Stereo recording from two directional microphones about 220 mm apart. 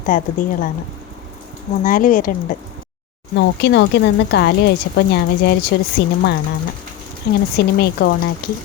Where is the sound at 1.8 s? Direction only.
40° left (ahead or behind).